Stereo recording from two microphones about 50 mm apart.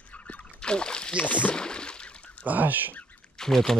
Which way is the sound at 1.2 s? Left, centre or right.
Left.